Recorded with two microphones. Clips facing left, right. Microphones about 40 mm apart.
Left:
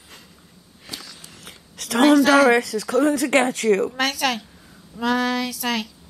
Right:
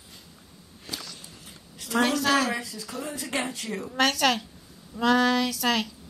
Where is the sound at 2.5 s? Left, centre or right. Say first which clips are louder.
Left 14 dB; left.